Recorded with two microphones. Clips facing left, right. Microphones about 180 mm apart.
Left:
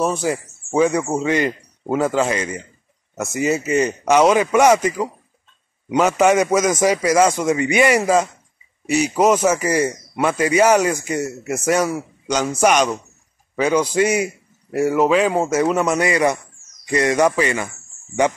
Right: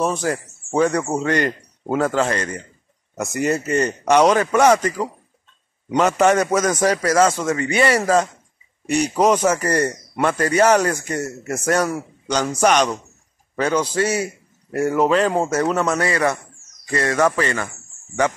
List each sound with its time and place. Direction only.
0.0 s speech: 10° left (ahead or behind)